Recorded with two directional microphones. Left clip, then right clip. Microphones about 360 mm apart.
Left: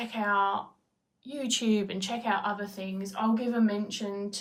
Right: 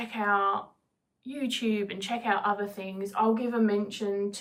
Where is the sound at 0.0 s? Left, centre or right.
Centre.